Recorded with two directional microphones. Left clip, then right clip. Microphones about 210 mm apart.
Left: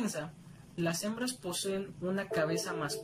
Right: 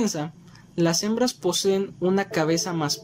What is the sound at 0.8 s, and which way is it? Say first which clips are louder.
Speech: right 12 dB; 35° right (ahead or behind).